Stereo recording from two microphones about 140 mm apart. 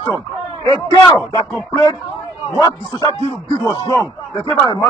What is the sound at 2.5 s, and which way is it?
Speech, 25° left (ahead or behind).